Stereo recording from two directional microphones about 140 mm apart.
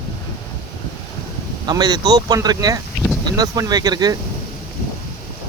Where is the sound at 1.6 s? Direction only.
30° right (ahead or behind).